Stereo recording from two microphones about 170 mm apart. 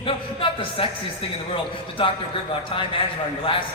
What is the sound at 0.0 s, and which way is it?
A man's voice, 30° left (ahead or behind).